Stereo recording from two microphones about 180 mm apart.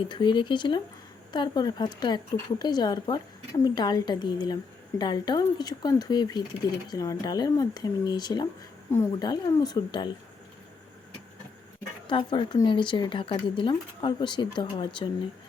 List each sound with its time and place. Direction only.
0.1 s speech: 25° left (ahead or behind)
12.0 s speech: 30° left (ahead or behind)